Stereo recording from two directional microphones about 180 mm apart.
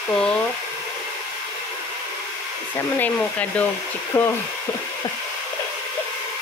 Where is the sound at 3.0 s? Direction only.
10° left (ahead or behind).